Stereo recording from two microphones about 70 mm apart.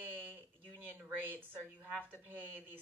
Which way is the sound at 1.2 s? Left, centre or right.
Right.